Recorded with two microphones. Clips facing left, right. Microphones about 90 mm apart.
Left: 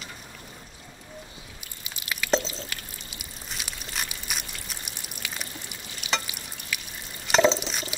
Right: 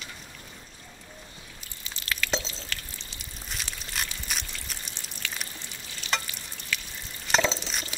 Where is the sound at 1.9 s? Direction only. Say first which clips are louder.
Right 1 dB; 15° left (ahead or behind).